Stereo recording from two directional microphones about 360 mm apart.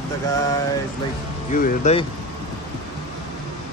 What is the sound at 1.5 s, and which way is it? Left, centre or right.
Speech, centre.